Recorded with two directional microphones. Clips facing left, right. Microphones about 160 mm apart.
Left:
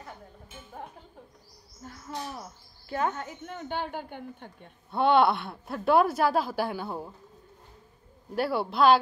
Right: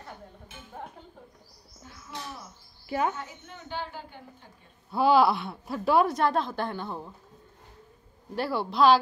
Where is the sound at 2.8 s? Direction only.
10° right (ahead or behind).